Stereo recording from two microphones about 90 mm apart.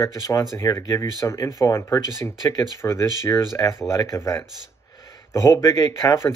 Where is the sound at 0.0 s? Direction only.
35° left (ahead or behind).